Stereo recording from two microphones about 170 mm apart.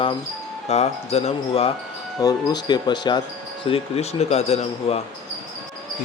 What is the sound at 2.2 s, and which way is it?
Speech, 25° left (ahead or behind).